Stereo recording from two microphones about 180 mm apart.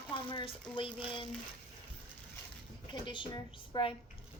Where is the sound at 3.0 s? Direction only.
25° left (ahead or behind).